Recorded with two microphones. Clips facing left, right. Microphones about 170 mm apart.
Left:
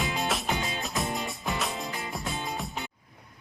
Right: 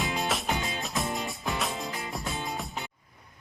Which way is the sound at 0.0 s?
Centre (ahead or behind).